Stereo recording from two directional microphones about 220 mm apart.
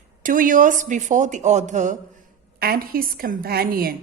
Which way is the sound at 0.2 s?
35° right (ahead or behind).